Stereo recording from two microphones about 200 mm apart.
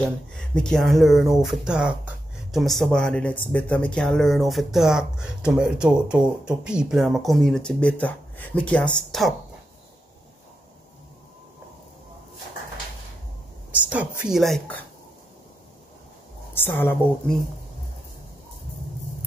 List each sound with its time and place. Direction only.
0.0 s speech: 5° left (ahead or behind)
13.7 s a woman's voice: 5° right (ahead or behind)
16.5 s a woman's voice: 10° left (ahead or behind)